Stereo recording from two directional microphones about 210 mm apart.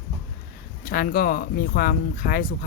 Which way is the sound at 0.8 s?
45° left (ahead or behind).